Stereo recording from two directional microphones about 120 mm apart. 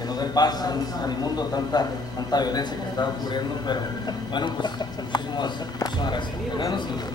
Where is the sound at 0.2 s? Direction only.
35° left (ahead or behind).